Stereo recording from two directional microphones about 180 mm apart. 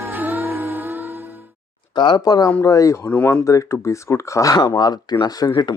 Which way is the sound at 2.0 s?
25° left (ahead or behind).